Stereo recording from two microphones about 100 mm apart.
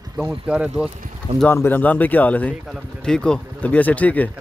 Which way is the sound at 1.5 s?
20° left (ahead or behind).